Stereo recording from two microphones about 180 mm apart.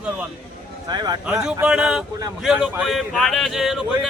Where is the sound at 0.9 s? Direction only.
25° right (ahead or behind).